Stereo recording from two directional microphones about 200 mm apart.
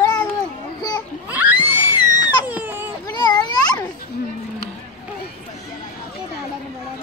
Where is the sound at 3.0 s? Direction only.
20° left (ahead or behind).